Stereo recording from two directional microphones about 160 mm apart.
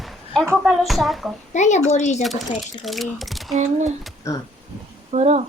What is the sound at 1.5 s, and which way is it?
Speech, 45° left (ahead or behind).